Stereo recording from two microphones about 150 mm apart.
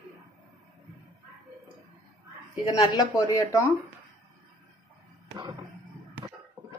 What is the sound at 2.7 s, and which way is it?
Speech, 25° left (ahead or behind).